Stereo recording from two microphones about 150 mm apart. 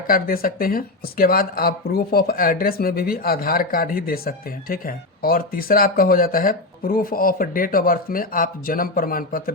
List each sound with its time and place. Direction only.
0.1 s speech: 75° left (ahead or behind)